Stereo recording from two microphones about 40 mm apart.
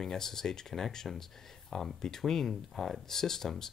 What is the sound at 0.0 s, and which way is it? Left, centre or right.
Speech, centre.